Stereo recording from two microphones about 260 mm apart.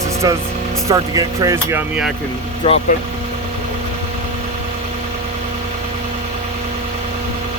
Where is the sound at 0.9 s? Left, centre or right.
Centre.